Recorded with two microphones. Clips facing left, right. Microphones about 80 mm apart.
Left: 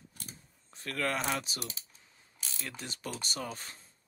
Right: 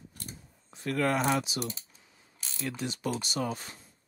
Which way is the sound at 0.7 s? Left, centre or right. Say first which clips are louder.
Right 6 dB; right.